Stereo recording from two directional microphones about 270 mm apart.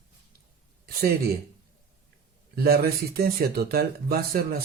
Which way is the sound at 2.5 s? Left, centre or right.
Right.